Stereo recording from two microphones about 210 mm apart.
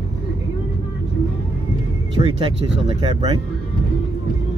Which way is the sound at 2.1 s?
25° right (ahead or behind).